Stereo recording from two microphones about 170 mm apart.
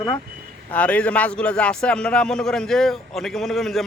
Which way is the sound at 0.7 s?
10° left (ahead or behind).